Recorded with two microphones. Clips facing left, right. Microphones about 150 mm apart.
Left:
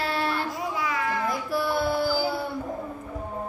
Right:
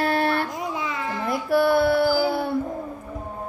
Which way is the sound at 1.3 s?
60° right (ahead or behind).